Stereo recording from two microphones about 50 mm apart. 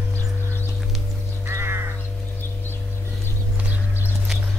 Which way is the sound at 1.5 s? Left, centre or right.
Right.